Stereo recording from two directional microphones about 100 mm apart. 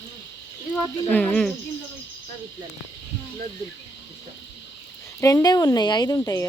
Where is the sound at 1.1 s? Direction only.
10° left (ahead or behind).